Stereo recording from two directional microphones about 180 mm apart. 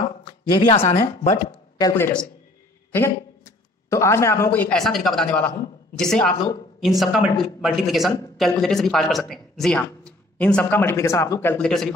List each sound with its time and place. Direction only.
0.2 s speech: 25° left (ahead or behind)
1.3 s speech: 20° left (ahead or behind)
3.9 s a man's voice: 15° left (ahead or behind)
11.5 s a man's voice: 5° left (ahead or behind)